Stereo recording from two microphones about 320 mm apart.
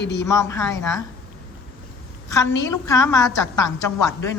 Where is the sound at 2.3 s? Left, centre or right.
Centre.